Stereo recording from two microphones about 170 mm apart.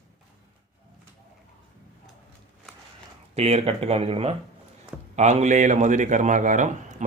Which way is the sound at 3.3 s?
40° right (ahead or behind).